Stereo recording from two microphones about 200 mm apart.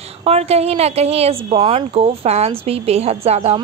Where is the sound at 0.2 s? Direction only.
30° right (ahead or behind).